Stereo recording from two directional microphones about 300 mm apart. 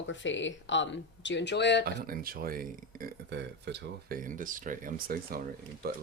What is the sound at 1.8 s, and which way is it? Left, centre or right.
Speech, right.